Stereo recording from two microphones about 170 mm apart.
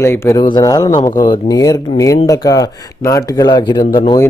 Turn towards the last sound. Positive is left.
turn(degrees=25)  # may be behind; listen again after turning